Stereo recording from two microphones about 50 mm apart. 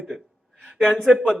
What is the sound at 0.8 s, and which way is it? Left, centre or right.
Speech, centre.